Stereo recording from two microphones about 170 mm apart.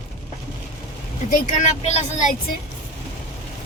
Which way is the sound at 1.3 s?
40° left (ahead or behind).